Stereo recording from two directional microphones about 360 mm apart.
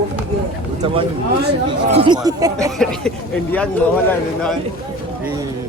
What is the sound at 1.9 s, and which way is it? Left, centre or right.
Speech, centre.